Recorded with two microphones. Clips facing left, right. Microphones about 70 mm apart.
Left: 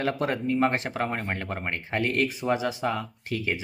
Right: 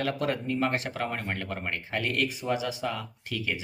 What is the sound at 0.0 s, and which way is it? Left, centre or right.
Speech, left.